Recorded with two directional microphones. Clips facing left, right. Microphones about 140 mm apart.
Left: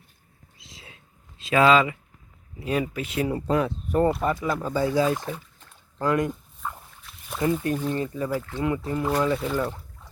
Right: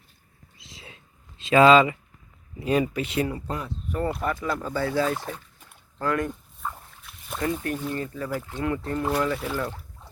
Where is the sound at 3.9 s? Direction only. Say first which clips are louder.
Left 5 dB; 30° left (ahead or behind).